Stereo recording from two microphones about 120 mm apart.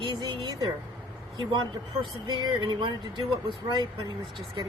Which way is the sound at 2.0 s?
40° right (ahead or behind).